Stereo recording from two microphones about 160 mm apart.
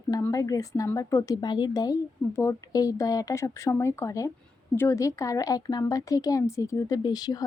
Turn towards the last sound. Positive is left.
turn(degrees=25)  # may be behind; listen again after turning